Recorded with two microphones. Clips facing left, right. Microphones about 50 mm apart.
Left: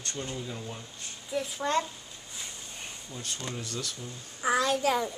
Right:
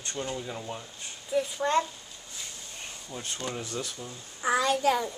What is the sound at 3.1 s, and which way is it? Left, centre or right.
Speech, right.